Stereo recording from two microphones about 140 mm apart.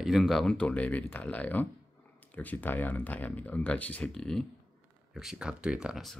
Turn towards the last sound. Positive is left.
turn(degrees=0)  # may be behind; listen again after turning